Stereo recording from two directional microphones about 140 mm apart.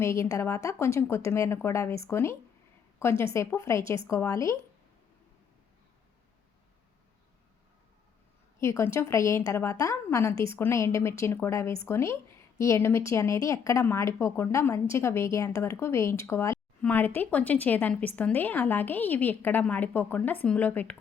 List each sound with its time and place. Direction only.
0.0 s a woman's voice: 20° left (ahead or behind)
8.6 s a woman's voice: 20° left (ahead or behind)